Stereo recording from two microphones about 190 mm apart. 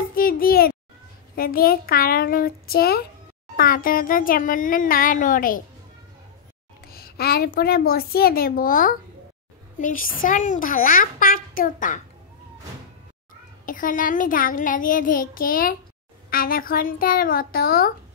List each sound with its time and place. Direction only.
0.1 s a sound: 50° left (ahead or behind)
1.3 s a child's voice: 50° left (ahead or behind)
6.9 s a child's voice: 55° left (ahead or behind)
13.7 s a child's voice: 45° left (ahead or behind)